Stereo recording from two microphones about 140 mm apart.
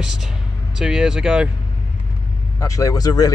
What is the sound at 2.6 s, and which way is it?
Speech, 25° left (ahead or behind).